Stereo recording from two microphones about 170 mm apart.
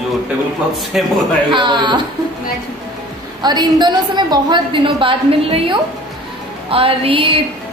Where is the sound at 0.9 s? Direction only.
Centre (ahead or behind).